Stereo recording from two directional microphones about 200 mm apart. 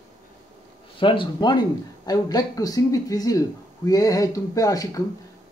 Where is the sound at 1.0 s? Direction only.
25° left (ahead or behind).